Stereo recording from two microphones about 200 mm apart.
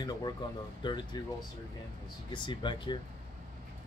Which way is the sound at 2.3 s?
25° left (ahead or behind).